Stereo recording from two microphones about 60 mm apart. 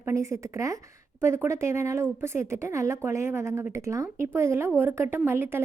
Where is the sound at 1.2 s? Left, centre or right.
Right.